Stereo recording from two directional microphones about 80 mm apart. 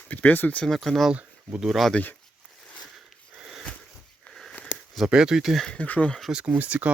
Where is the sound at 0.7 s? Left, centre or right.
Centre.